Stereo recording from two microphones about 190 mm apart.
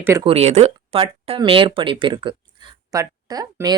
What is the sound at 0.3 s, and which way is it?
Speech, 35° right (ahead or behind).